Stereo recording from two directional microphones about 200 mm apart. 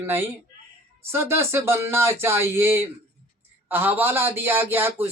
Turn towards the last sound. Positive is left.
turn(degrees=-10)  # may be behind; listen again after turning